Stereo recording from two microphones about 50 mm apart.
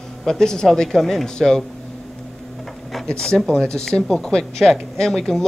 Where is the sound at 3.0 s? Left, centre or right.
Centre.